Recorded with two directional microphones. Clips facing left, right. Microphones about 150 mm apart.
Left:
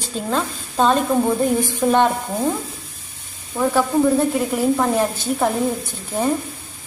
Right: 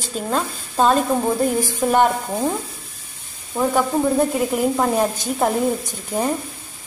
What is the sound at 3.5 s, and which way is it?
Speech, 20° right (ahead or behind).